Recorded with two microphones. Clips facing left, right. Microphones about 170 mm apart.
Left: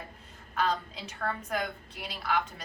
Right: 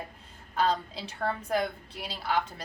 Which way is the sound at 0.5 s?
30° right (ahead or behind).